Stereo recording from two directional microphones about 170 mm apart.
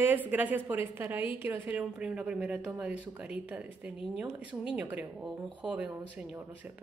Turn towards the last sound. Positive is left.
turn(degrees=-5)  # may be behind; listen again after turning